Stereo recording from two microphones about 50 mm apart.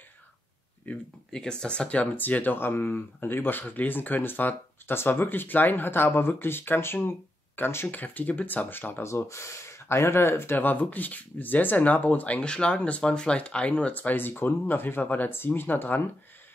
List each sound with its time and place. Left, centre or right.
0.9 s speech: left
1.3 s speech: centre
2.1 s speech: left
8.0 s speech: left
9.0 s speech: left